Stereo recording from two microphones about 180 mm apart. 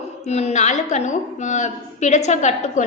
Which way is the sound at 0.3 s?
40° left (ahead or behind).